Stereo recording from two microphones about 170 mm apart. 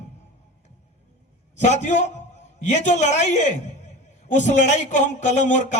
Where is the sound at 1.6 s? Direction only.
45° left (ahead or behind).